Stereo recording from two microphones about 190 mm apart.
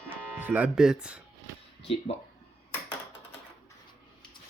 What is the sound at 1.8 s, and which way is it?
Speech, 30° left (ahead or behind).